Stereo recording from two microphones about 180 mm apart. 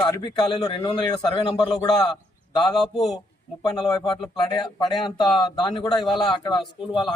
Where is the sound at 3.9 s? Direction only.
25° left (ahead or behind).